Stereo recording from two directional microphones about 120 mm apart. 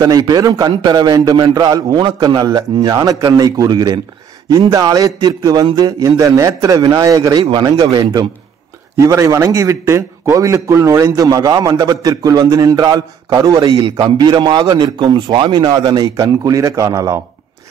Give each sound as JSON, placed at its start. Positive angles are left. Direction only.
{"t": 0.0, "sound": "a man's voice", "side_deg": -30}
{"t": 7.4, "sound": "a man's voice", "side_deg": -45}